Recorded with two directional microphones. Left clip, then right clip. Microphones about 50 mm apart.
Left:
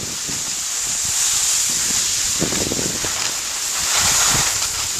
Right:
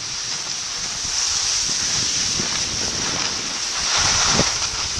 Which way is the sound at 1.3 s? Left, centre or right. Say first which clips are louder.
Left 1 dB; centre.